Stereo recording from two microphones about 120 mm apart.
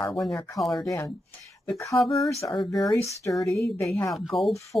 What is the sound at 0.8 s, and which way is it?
Speech, 25° left (ahead or behind).